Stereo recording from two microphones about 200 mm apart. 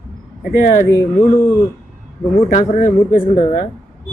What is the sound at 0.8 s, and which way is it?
Speech, 15° left (ahead or behind).